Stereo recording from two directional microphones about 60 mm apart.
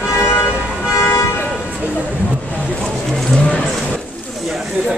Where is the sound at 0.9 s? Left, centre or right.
Left.